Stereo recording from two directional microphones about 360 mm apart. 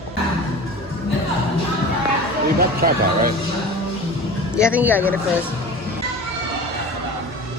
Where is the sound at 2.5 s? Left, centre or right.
Right.